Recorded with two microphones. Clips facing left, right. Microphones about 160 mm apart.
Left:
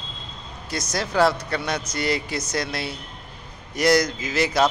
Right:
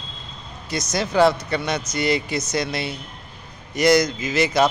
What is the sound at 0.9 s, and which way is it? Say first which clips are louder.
A man's voice: right 3 dB; 5° left (ahead or behind).